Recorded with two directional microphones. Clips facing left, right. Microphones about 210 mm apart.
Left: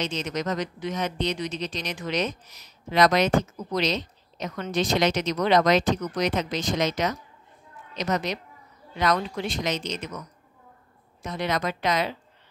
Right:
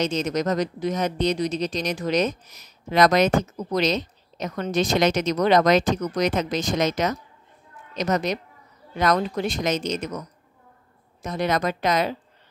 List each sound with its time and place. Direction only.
0.0 s speech: 45° right (ahead or behind)
11.2 s speech: 45° right (ahead or behind)